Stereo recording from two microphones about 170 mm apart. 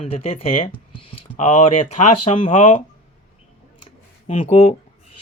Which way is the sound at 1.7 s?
35° left (ahead or behind).